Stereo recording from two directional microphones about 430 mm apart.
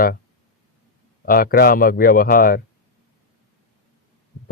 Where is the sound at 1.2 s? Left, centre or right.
Centre.